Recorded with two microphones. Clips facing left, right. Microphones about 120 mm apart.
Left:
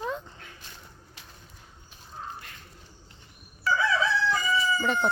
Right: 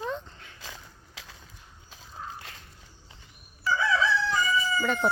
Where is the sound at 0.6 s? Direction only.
90° right.